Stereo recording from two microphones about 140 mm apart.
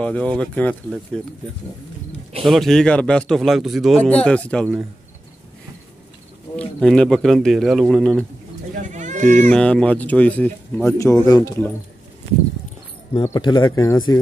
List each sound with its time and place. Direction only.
0.0 s speech: 10° left (ahead or behind)
2.4 s speech: centre (ahead or behind)
6.5 s speech: 5° left (ahead or behind)
8.7 s a sound: 60° right (ahead or behind)
9.5 s speech: 5° left (ahead or behind); by 11.6 s 25° left (ahead or behind)
13.1 s speech: 35° left (ahead or behind)